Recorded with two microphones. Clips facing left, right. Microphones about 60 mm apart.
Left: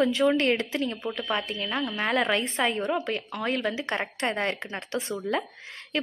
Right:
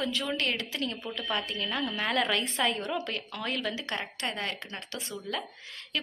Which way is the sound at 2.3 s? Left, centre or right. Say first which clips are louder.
Left 3 dB; left.